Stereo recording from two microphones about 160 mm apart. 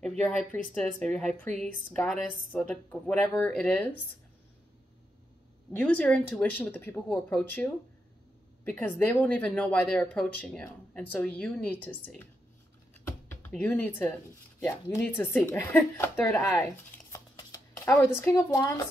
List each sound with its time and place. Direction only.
0.2 s speech: 10° left (ahead or behind)
5.7 s speech: 10° left (ahead or behind)
13.5 s speech: 10° left (ahead or behind)
17.1 s shuffling cards: 20° left (ahead or behind)